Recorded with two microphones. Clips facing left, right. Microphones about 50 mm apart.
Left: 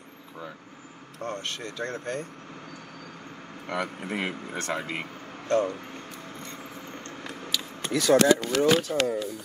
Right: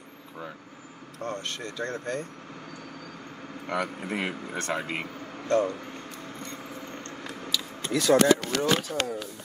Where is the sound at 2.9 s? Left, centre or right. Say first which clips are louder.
Right 1 dB; centre.